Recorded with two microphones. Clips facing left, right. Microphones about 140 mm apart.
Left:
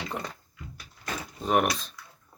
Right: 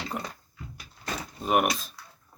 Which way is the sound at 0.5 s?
35° right (ahead or behind).